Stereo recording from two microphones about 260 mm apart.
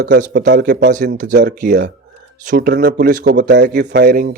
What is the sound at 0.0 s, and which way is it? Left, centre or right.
A man's voice, right.